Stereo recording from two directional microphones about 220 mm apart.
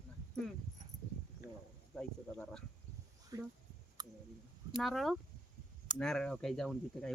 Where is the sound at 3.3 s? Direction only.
15° right (ahead or behind).